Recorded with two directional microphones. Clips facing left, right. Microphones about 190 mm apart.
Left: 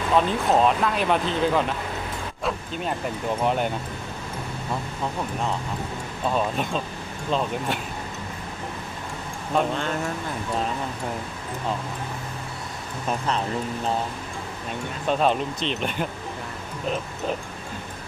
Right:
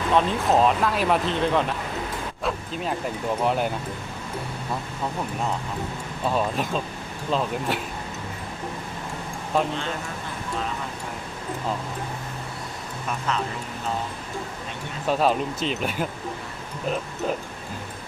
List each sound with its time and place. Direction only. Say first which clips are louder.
0.1 s speech: even; centre (ahead or behind)
2.4 s vehicle: left 1 dB; centre (ahead or behind)
3.4 s speech: even; centre (ahead or behind)
6.2 s speech: even; centre (ahead or behind)
13.1 s speech: left 2 dB; 35° left (ahead or behind)
15.0 s speech: even; 5° right (ahead or behind)